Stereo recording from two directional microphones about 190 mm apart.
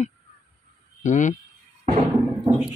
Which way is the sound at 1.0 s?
40° left (ahead or behind).